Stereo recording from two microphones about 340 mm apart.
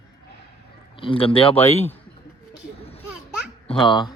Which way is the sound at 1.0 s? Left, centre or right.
Centre.